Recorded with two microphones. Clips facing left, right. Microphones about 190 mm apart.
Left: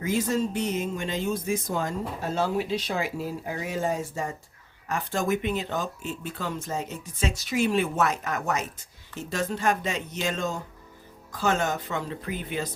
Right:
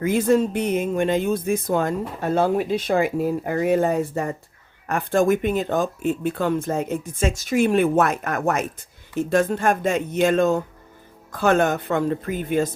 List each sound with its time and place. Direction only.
0.0 s speech: 55° right (ahead or behind)